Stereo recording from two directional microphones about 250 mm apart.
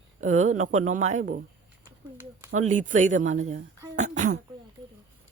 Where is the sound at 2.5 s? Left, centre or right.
Right.